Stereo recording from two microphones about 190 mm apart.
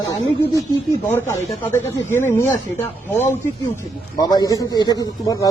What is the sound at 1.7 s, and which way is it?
Speech, 15° left (ahead or behind).